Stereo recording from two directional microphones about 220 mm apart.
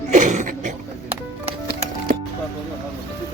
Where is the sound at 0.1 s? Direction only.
35° right (ahead or behind).